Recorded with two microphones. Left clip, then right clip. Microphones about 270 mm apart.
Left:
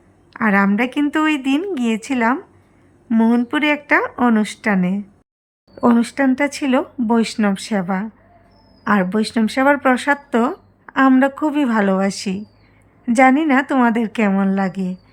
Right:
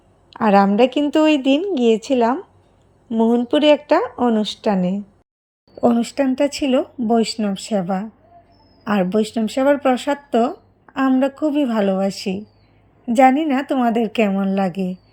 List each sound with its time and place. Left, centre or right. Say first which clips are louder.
0.6 s speech: right 3 dB; centre
5.8 s a woman's voice: left 1 dB; centre